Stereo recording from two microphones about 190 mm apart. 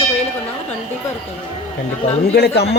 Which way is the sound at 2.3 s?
60° left (ahead or behind).